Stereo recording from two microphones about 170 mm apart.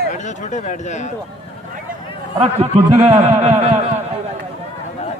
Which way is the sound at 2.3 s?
40° right (ahead or behind).